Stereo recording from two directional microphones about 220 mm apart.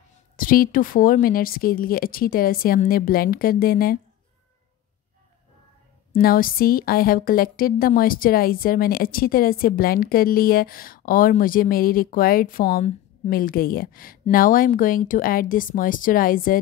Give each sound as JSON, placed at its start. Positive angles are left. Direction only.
{"t": 0.4, "sound": "a woman's voice", "side_deg": 40}
{"t": 6.1, "sound": "a woman's voice", "side_deg": 40}